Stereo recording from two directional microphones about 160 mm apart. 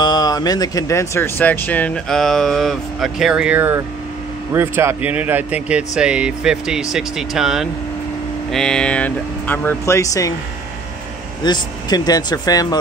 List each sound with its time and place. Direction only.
0.0 s speech: 25° left (ahead or behind)
11.4 s speech: 25° left (ahead or behind)